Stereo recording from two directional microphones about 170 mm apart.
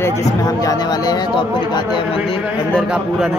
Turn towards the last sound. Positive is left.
turn(degrees=-5)  # may be behind; listen again after turning